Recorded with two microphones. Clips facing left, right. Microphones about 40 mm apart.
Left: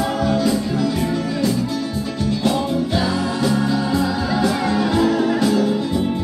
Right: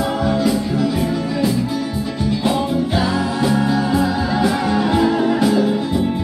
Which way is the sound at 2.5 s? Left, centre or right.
Centre.